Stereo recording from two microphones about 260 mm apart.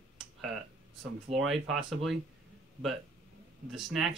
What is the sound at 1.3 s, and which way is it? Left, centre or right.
Speech, right.